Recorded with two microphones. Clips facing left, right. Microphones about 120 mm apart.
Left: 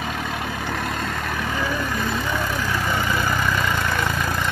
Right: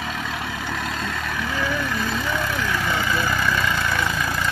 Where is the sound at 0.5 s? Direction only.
45° left (ahead or behind).